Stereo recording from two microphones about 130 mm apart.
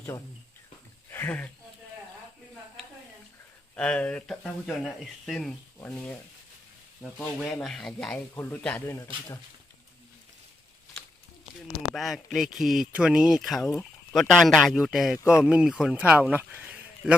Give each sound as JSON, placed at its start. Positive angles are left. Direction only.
{"t": 1.1, "sound": "speech", "side_deg": 15}
{"t": 3.8, "sound": "a man's voice", "side_deg": 10}
{"t": 8.4, "sound": "a man's voice", "side_deg": 15}
{"t": 11.9, "sound": "speech", "side_deg": 0}
{"t": 15.2, "sound": "speech", "side_deg": 20}
{"t": 15.4, "sound": "speech", "side_deg": -5}